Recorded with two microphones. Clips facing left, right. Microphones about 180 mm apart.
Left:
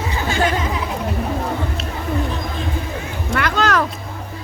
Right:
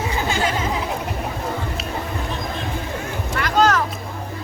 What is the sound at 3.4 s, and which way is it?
Music, 70° left (ahead or behind).